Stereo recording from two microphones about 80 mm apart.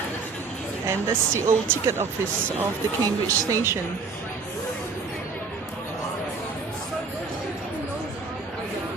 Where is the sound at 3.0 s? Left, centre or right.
Right.